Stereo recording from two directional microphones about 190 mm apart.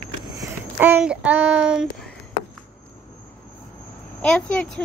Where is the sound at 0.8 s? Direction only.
10° right (ahead or behind).